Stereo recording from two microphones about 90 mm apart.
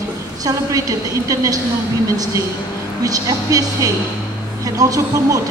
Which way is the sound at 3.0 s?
40° right (ahead or behind).